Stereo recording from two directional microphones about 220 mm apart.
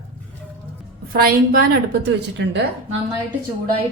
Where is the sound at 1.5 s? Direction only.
45° right (ahead or behind).